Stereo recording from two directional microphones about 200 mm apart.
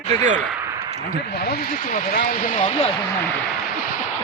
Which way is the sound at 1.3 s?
50° left (ahead or behind).